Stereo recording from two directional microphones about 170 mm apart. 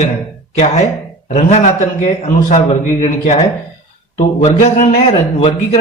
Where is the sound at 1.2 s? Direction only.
40° left (ahead or behind).